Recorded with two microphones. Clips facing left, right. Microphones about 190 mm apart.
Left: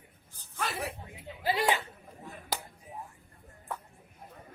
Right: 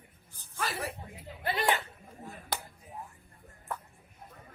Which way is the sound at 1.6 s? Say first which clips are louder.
Even; 20° left (ahead or behind).